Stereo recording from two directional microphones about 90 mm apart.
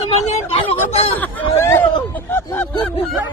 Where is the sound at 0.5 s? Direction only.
90° left.